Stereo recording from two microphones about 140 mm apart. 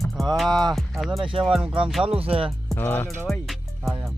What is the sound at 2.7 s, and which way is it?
Speech, 15° left (ahead or behind).